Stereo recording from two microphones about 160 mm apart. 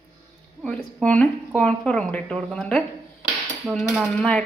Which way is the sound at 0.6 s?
5° left (ahead or behind).